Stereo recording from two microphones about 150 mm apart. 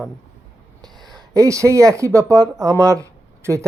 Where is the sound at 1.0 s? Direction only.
25° right (ahead or behind).